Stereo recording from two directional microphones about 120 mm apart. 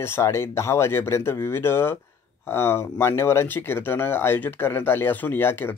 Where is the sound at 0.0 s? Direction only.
20° left (ahead or behind).